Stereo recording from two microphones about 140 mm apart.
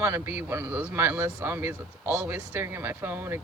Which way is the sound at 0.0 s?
15° right (ahead or behind).